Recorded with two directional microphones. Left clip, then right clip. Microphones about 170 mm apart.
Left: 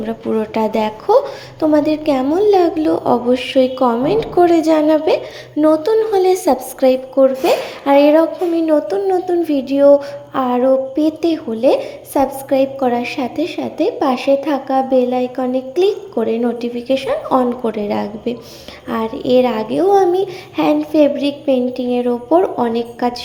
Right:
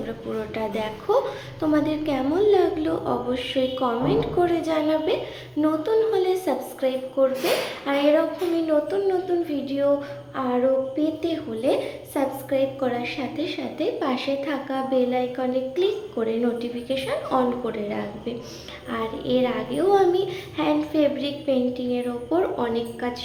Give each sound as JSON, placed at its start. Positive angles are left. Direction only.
{"t": 0.0, "sound": "a woman's voice", "side_deg": 40}